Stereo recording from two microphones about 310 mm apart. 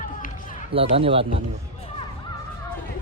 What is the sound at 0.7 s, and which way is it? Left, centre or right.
Speech, centre.